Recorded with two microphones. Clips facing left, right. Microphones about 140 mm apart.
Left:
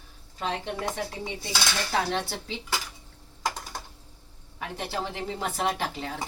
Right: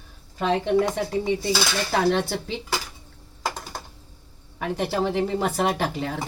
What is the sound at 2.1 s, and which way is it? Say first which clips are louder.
Speech: right 8 dB; 60° right (ahead or behind).